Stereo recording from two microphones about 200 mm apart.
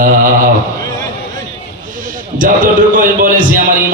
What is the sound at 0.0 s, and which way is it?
Speech, 45° right (ahead or behind).